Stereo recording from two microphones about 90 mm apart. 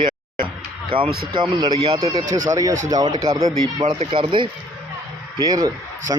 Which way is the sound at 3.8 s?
80° right.